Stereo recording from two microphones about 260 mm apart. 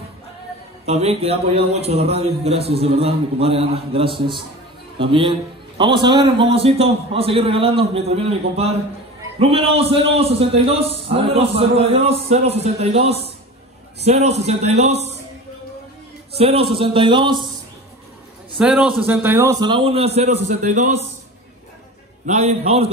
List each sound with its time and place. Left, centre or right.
0.8 s a man's voice: right
16.3 s a man's voice: right
18.6 s a man's voice: centre; by 20.8 s right
22.2 s a man's voice: right